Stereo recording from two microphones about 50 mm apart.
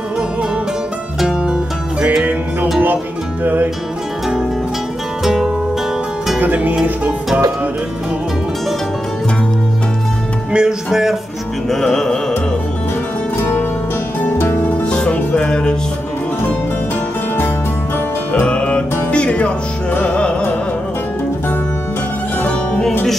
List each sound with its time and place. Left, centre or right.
1.2 s music: centre
5.2 s music: centre
6.4 s music: right
10.5 s speech: centre
11.7 s music: centre
13.4 s music: left
14.9 s music: centre
18.3 s music: left